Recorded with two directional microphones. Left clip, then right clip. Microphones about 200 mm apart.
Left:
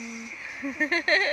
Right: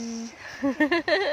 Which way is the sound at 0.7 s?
40° right (ahead or behind).